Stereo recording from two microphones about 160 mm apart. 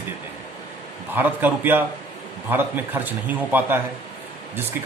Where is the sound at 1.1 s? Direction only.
10° right (ahead or behind).